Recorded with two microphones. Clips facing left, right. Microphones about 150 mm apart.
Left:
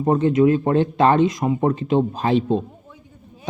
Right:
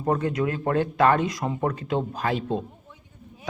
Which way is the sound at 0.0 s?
25° left (ahead or behind).